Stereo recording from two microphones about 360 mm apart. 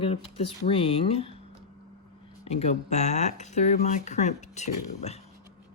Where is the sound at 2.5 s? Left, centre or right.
Centre.